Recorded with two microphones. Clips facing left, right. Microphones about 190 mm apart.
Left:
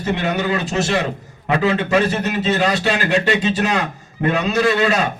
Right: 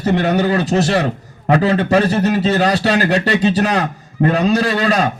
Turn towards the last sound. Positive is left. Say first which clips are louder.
# right 1 dB
turn(degrees=-35)  # may be behind; listen again after turning